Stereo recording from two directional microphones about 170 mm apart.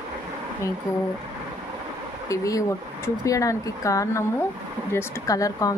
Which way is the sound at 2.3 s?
20° left (ahead or behind).